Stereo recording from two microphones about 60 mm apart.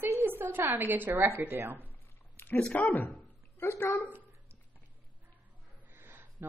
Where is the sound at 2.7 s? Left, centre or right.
Left.